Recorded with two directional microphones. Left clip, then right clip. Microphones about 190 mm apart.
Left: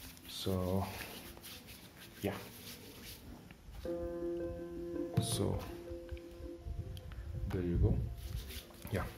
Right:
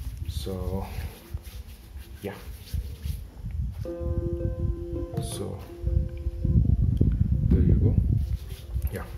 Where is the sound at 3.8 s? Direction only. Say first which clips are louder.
Right 5 dB; 25° right (ahead or behind).